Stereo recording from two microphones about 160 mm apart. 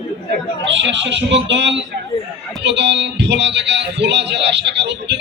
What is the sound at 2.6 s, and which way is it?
Speech, 90° right.